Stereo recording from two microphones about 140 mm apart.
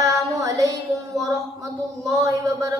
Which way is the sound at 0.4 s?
25° right (ahead or behind).